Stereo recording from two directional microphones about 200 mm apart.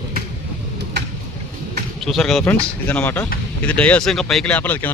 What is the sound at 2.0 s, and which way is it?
Speech, centre (ahead or behind).